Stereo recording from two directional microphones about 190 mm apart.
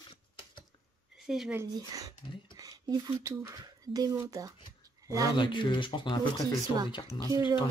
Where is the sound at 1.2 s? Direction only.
Centre (ahead or behind).